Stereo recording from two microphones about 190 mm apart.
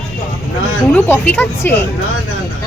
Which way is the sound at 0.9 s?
10° left (ahead or behind).